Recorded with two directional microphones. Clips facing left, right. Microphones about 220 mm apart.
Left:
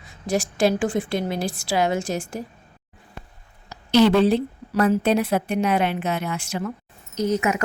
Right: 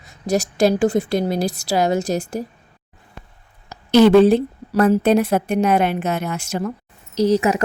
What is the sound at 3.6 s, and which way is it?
A woman's voice, 50° right (ahead or behind).